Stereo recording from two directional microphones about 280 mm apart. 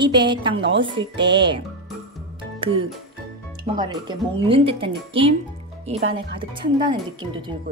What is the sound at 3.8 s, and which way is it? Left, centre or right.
Speech, centre.